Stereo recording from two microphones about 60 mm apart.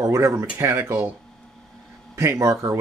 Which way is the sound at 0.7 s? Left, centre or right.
Right.